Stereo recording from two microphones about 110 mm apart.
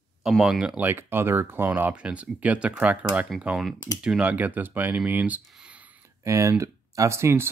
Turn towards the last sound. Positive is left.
turn(degrees=-25)  # may be behind; listen again after turning